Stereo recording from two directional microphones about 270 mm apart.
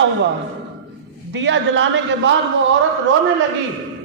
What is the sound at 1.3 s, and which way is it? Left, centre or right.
Speech, right.